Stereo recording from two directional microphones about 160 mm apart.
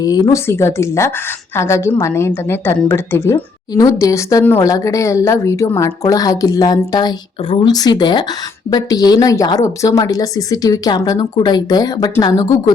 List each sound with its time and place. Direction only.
0.0 s a woman's voice: 25° left (ahead or behind)